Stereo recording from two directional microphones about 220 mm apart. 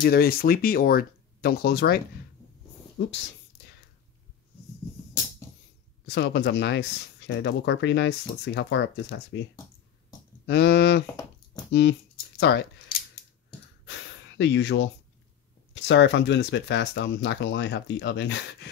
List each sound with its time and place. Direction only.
0.0 s speech: 45° left (ahead or behind)
6.0 s speech: 50° left (ahead or behind)
10.4 s speech: 50° left (ahead or behind)
11.7 s a sound: 50° left (ahead or behind)
13.8 s gasp: 55° left (ahead or behind)
15.7 s speech: 55° left (ahead or behind)